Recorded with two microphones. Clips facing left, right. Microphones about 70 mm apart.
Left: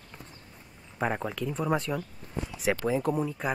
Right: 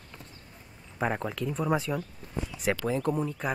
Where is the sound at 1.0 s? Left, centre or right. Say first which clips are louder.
Even; centre.